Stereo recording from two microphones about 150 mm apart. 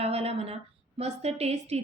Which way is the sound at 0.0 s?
40° right (ahead or behind).